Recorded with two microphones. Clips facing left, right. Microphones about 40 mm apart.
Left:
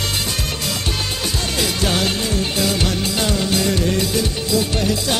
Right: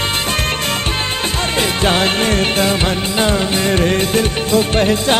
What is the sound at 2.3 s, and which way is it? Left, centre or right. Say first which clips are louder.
Music: right 6 dB; right.